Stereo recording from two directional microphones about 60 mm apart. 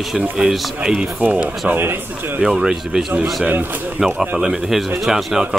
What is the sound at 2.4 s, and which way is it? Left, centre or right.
Speech, centre.